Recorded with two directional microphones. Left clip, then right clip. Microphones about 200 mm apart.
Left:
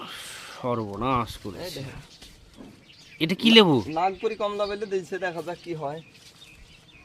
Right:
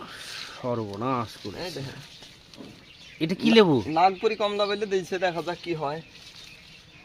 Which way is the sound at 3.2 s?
30° left (ahead or behind).